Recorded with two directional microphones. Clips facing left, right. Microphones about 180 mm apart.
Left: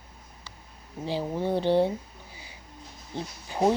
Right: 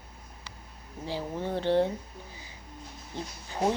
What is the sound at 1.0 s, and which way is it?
Speech, 15° left (ahead or behind).